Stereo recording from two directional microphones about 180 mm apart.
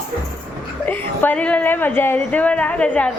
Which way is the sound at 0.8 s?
10° left (ahead or behind).